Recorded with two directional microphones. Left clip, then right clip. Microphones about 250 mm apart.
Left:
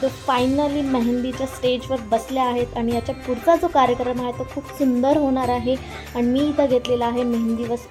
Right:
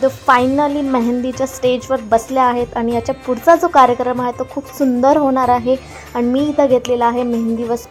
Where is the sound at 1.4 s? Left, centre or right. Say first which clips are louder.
Right 8 dB; centre.